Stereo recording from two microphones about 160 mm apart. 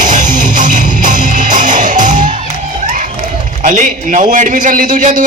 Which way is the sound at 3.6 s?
55° right (ahead or behind).